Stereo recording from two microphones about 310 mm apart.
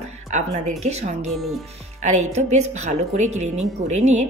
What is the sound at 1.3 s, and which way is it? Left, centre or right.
Speech, centre.